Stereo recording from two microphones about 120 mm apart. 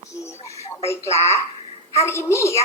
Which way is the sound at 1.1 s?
25° left (ahead or behind).